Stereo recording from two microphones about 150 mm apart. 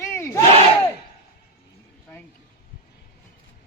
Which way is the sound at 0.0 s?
20° left (ahead or behind).